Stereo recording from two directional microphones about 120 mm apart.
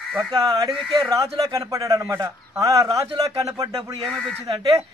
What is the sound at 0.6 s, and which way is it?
Speech, 5° left (ahead or behind).